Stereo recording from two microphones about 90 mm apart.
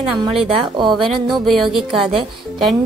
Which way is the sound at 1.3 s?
Centre (ahead or behind).